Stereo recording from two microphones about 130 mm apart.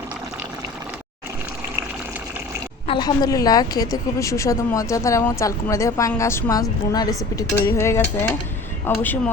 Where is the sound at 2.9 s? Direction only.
35° left (ahead or behind).